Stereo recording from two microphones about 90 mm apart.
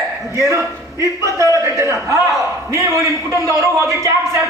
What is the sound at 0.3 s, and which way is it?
A man's voice, 35° right (ahead or behind).